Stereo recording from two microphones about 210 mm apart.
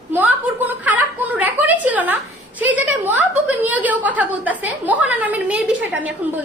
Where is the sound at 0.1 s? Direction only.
10° right (ahead or behind).